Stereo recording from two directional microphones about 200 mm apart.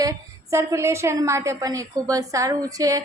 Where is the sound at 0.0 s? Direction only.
15° right (ahead or behind).